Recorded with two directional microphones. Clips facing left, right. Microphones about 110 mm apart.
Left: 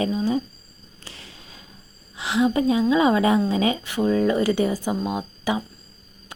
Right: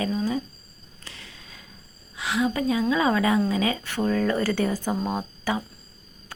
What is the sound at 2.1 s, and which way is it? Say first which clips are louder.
A woman's voice: left 4 dB; 30° left (ahead or behind).